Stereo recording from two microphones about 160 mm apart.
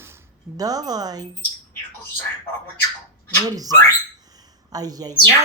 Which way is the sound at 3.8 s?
25° right (ahead or behind).